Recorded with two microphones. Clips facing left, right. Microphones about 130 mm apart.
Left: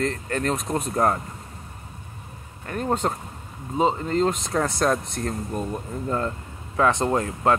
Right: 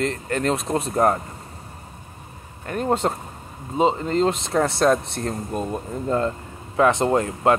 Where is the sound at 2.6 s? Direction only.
25° right (ahead or behind).